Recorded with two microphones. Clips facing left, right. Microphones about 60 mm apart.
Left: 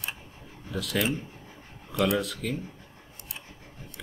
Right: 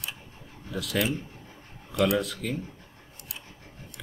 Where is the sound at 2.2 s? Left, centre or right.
Centre.